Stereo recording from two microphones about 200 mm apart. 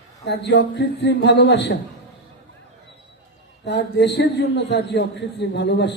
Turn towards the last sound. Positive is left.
turn(degrees=60)  # may be behind; listen again after turning